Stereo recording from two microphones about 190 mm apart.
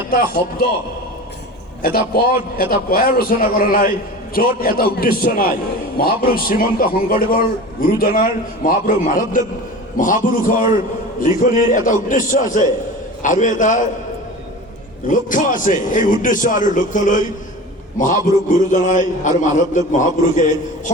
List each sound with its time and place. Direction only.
0.1 s a man's voice: 50° left (ahead or behind)
1.8 s a man's voice: 50° left (ahead or behind)
15.0 s a man's voice: 45° left (ahead or behind)